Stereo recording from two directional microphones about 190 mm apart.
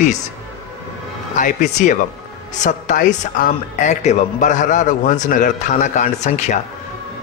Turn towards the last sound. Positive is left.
turn(degrees=40)  # may be behind; listen again after turning